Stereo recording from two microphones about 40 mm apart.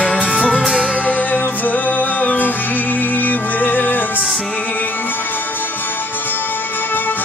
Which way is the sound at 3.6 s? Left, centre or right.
Left.